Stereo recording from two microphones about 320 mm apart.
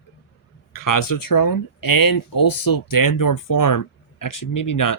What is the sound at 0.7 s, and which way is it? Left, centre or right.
Speech, left.